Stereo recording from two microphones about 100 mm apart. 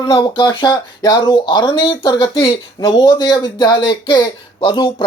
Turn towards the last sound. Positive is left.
turn(degrees=55)  # may be behind; listen again after turning